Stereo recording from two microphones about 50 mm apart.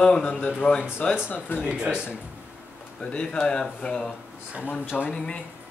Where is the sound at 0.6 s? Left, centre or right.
Left.